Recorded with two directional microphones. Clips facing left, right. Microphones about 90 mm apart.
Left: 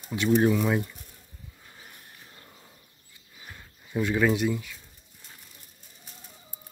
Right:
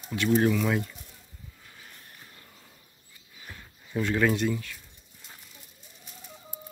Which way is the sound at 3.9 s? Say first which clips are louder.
Left 1 dB; 10° left (ahead or behind).